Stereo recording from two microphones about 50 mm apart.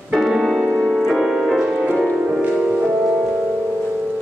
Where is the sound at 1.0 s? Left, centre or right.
Centre.